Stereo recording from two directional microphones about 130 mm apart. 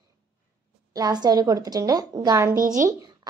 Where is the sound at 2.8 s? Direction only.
30° right (ahead or behind).